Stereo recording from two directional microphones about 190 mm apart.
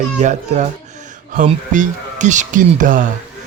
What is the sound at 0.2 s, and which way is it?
Speech, 40° right (ahead or behind).